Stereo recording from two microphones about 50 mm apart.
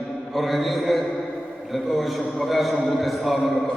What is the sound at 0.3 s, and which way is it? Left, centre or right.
A man's voice, centre.